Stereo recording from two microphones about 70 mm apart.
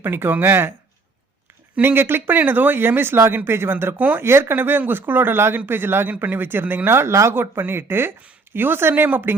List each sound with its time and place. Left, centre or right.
0.0 s speech: right
1.8 s speech: right